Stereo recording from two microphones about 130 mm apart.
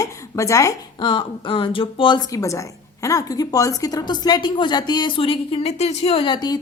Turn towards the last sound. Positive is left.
turn(degrees=35)  # may be behind; listen again after turning